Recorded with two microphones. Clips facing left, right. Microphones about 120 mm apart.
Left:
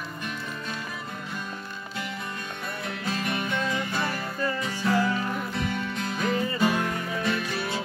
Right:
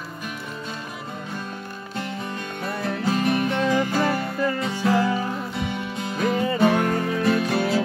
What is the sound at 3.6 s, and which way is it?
Music, 90° right.